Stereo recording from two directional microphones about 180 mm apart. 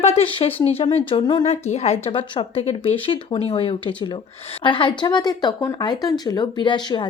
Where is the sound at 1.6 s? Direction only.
35° left (ahead or behind).